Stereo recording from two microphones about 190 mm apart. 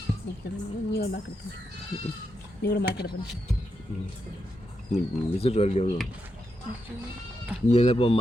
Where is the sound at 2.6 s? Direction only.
60° left (ahead or behind).